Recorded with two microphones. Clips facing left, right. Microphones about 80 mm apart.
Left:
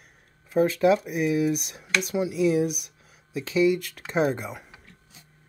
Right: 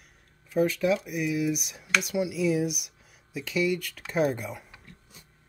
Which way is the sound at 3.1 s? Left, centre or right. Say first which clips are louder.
Left 3 dB; left.